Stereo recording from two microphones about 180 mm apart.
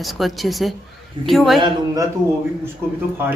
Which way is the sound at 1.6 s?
20° right (ahead or behind).